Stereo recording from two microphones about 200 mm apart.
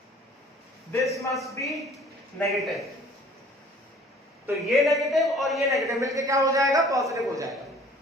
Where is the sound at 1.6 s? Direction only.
Centre (ahead or behind).